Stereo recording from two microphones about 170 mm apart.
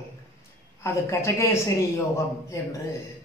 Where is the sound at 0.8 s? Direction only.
15° left (ahead or behind).